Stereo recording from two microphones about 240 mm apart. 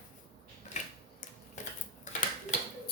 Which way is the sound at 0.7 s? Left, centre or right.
Left.